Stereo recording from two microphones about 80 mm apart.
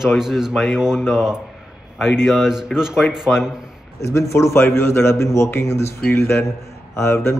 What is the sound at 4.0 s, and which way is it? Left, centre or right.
A man's voice, left.